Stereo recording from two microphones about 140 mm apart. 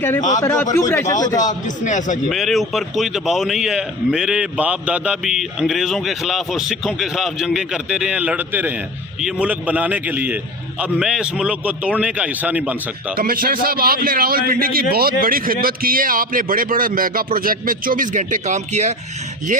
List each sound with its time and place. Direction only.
0.3 s a man's voice: 20° left (ahead or behind)
1.4 s a man's voice: 65° left (ahead or behind)
2.3 s a man's voice: centre (ahead or behind)
13.1 s a man's voice: 90° right; by 18.9 s 55° right (ahead or behind)